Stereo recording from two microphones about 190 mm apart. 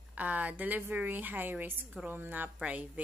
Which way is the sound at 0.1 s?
10° right (ahead or behind).